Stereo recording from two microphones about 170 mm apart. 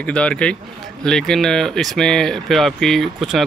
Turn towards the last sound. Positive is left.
turn(degrees=0)  # may be behind; listen again after turning